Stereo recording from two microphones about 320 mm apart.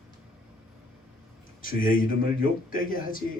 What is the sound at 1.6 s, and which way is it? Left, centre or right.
A man's voice, left.